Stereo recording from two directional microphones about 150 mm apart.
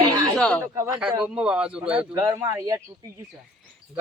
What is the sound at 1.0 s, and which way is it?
A man's voice, 5° right (ahead or behind).